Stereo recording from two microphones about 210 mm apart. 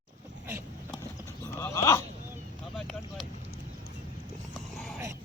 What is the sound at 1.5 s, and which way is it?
Dog, 15° left (ahead or behind).